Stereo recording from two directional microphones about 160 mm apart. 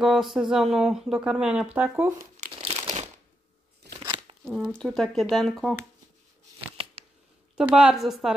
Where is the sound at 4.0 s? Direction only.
30° right (ahead or behind).